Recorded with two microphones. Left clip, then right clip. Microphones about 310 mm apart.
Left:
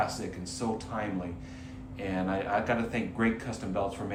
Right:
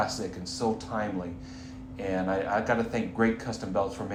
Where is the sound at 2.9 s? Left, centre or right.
Right.